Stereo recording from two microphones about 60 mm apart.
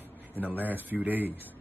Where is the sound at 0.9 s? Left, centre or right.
Right.